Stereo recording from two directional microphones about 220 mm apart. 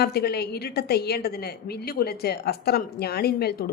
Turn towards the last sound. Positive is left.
turn(degrees=45)  # may be behind; listen again after turning